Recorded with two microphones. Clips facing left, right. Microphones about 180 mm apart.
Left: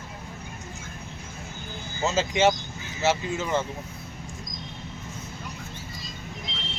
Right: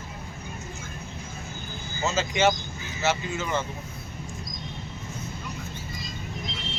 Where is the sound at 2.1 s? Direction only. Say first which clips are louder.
Left 1 dB; 30° left (ahead or behind).